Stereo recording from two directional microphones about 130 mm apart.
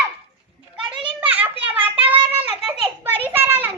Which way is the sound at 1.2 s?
10° right (ahead or behind).